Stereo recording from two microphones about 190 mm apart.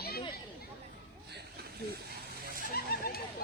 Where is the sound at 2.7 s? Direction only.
55° left (ahead or behind).